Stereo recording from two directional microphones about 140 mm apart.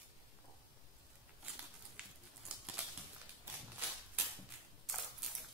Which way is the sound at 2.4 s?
10° right (ahead or behind).